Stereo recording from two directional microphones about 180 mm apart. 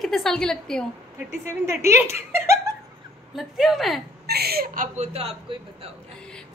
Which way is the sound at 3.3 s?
Centre (ahead or behind).